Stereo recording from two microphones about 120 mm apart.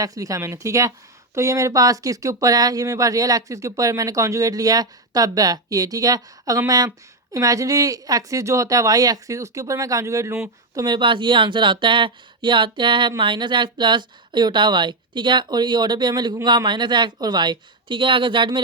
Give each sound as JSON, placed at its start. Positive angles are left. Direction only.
{"t": 0.0, "sound": "speech", "side_deg": -30}
{"t": 10.8, "sound": "speech", "side_deg": -40}